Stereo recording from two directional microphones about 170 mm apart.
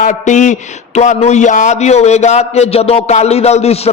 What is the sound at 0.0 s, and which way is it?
A man's voice, 45° left (ahead or behind).